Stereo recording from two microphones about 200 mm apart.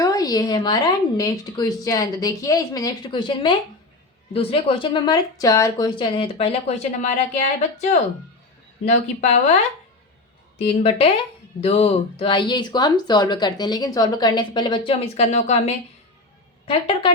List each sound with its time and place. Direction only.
0.0 s speech: 20° left (ahead or behind); by 9.4 s 35° left (ahead or behind)
10.7 s speech: 30° left (ahead or behind)